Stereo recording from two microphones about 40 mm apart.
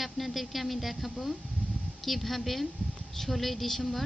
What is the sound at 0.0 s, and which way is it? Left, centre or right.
A woman's voice, centre.